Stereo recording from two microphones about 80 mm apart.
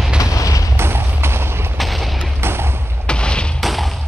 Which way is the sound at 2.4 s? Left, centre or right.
Right.